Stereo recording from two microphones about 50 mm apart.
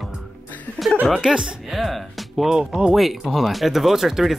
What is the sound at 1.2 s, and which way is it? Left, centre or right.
Speech, centre.